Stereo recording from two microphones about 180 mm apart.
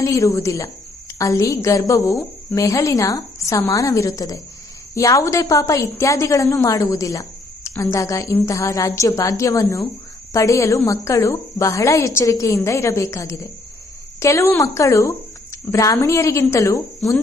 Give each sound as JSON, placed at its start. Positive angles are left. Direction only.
{"t": 0.0, "sound": "a woman's voice", "side_deg": 15}